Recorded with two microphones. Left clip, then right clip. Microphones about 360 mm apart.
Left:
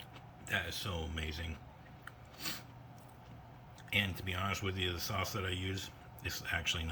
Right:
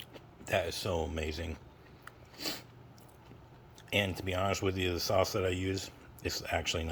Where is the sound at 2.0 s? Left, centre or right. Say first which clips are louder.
Right 4 dB; centre.